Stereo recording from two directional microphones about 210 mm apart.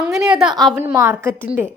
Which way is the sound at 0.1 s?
5° right (ahead or behind).